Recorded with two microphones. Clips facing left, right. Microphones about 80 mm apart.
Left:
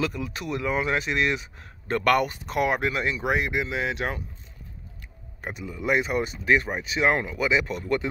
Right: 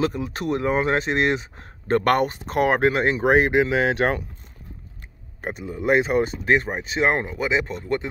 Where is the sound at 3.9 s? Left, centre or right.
Right.